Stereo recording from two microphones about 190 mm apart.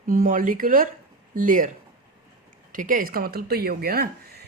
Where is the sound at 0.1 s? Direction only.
45° right (ahead or behind).